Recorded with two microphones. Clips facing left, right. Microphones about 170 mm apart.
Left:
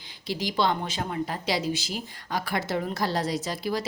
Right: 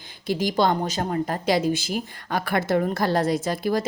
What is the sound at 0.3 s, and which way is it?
A woman's voice, 50° right (ahead or behind).